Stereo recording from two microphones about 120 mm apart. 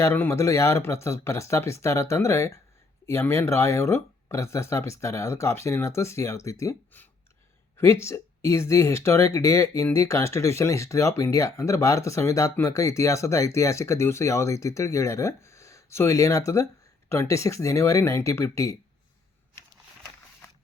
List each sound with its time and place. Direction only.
0.0 s speech: 15° left (ahead or behind)
7.8 s speech: 25° left (ahead or behind)